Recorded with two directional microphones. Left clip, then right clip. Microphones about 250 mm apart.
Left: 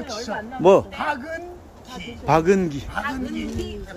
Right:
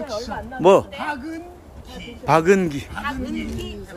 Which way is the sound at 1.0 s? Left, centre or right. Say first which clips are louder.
Left 2 dB; centre.